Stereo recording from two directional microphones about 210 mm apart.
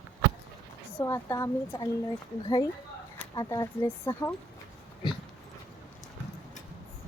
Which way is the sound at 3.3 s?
15° left (ahead or behind).